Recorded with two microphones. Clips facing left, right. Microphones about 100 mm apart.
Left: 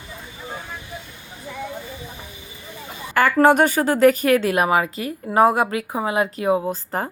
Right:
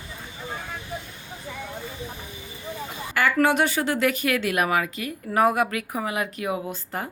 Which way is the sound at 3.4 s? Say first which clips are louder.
Left 7 dB; 45° left (ahead or behind).